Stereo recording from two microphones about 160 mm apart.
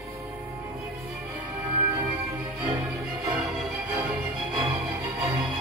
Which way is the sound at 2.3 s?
5° right (ahead or behind).